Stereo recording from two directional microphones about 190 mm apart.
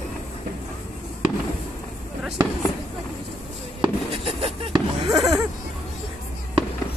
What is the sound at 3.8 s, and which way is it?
Fireworks, 30° right (ahead or behind).